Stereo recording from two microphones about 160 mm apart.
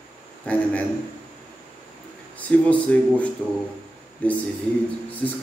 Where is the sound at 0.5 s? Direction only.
10° left (ahead or behind).